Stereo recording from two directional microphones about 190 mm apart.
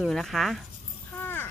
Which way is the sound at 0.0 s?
Centre (ahead or behind).